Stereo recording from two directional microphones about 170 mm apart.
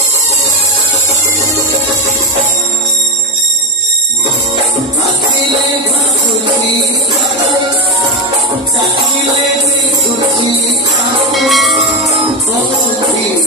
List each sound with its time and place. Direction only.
11.3 s music: centre (ahead or behind)